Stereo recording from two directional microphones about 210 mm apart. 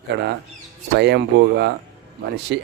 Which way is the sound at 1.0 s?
55° right (ahead or behind).